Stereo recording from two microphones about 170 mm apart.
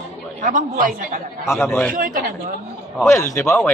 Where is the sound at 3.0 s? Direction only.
15° left (ahead or behind).